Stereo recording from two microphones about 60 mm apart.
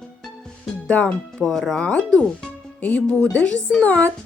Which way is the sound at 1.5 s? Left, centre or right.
Centre.